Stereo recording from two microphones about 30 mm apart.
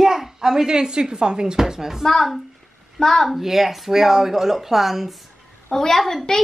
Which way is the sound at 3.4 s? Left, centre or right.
Centre.